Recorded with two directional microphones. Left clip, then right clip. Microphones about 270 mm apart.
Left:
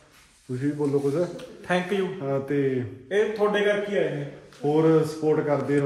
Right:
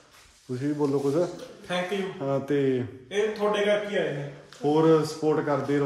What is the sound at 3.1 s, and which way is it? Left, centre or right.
Speech, centre.